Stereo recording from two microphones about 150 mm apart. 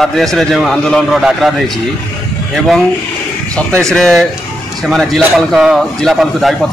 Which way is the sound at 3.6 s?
10° left (ahead or behind).